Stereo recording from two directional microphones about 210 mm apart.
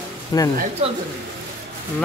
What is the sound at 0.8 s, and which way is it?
Speech, 30° right (ahead or behind).